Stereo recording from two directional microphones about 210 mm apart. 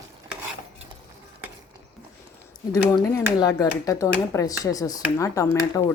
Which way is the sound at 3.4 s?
15° left (ahead or behind).